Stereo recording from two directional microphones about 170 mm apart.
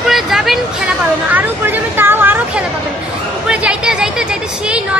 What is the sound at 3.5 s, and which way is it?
Chatter, 5° right (ahead or behind).